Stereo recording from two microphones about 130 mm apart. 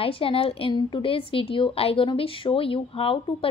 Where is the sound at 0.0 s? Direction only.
45° left (ahead or behind).